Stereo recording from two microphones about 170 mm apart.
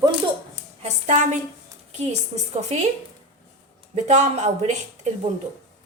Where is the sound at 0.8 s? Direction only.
45° right (ahead or behind).